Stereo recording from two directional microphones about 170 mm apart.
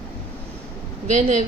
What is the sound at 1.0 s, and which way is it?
Speech, 45° right (ahead or behind).